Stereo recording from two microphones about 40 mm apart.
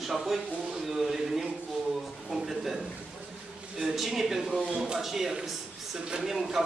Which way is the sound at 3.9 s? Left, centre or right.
Centre.